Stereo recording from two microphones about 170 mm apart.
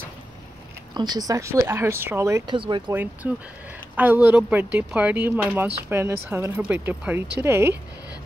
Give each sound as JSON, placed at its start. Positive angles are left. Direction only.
{"t": 0.9, "sound": "speech", "side_deg": -25}
{"t": 2.5, "sound": "speech", "side_deg": -30}
{"t": 2.9, "sound": "speech", "side_deg": -10}